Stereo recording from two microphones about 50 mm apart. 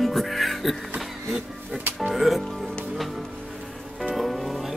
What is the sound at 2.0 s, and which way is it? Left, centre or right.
Speech, centre.